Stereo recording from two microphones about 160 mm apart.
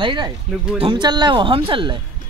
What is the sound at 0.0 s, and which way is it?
Speech, 30° right (ahead or behind).